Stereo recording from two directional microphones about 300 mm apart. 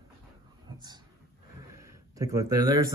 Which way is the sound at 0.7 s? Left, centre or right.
Centre.